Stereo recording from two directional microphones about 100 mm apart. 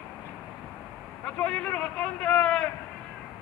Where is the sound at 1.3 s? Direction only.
10° left (ahead or behind).